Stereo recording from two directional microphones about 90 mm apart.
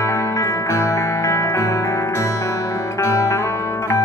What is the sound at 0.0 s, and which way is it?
Music, 35° left (ahead or behind).